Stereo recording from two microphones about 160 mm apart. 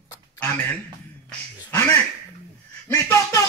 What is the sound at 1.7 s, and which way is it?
Speech, 15° left (ahead or behind).